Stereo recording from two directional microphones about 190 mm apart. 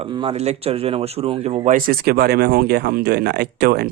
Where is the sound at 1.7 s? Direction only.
45° right (ahead or behind).